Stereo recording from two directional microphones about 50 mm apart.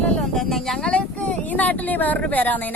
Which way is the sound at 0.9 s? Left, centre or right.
Left.